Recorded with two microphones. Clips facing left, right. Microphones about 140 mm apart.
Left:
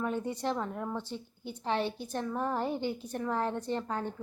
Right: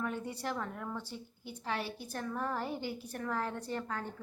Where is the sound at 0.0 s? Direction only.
25° left (ahead or behind).